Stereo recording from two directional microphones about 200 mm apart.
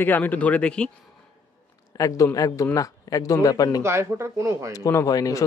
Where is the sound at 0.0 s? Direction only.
10° left (ahead or behind).